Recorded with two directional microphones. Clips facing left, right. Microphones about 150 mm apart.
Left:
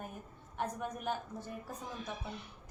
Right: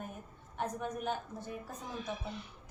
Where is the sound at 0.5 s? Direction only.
5° left (ahead or behind).